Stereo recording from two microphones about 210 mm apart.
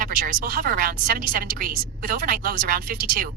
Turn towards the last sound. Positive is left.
turn(degrees=-40)  # may be behind; listen again after turning